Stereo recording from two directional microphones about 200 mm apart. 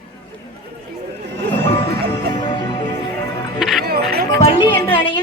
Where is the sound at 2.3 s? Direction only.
20° left (ahead or behind).